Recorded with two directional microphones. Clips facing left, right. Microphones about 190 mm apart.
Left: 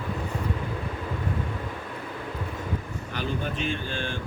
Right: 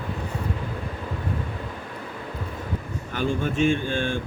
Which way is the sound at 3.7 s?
50° right (ahead or behind).